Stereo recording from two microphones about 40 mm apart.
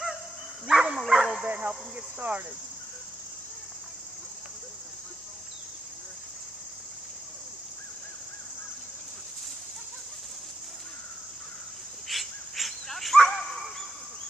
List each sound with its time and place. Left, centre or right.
0.7 s dog: centre
1.4 s cricket: right
12.1 s dog: centre